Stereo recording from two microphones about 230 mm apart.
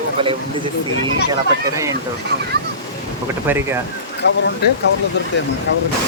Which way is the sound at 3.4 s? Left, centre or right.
Centre.